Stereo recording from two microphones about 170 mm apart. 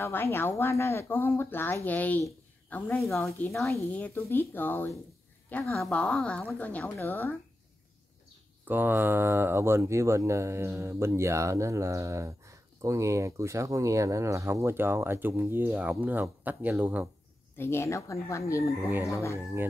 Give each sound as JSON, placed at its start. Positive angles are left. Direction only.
{"t": 0.0, "sound": "speech", "side_deg": 15}
{"t": 8.6, "sound": "speech", "side_deg": -10}
{"t": 17.6, "sound": "speech", "side_deg": 15}